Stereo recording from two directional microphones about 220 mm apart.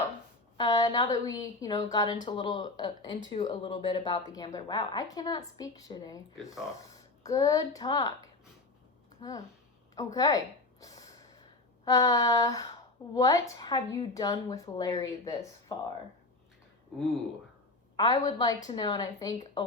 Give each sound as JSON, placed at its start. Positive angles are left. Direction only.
{"t": 0.5, "sound": "a woman's voice", "side_deg": 20}
{"t": 2.1, "sound": "speech", "side_deg": 35}
{"t": 2.4, "sound": "a woman's voice", "side_deg": 20}
{"t": 9.9, "sound": "a sound", "side_deg": 15}
{"t": 11.9, "sound": "a woman's voice", "side_deg": 15}
{"t": 17.9, "sound": "a woman's voice", "side_deg": 20}